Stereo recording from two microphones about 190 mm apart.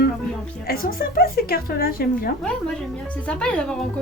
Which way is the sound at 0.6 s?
50° left (ahead or behind).